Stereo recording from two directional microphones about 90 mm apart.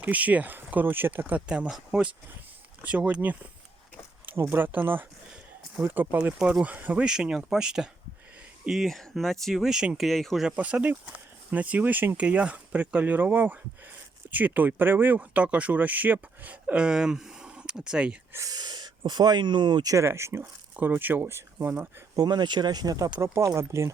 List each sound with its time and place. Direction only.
0.0 s speech: 15° right (ahead or behind)
10.0 s speech: 5° left (ahead or behind)
10.4 s speech: 15° right (ahead or behind)
18.3 s speech: 45° right (ahead or behind)
19.9 s speech: 30° right (ahead or behind)
22.1 s speech: 50° right (ahead or behind)
23.2 s speech: 30° right (ahead or behind)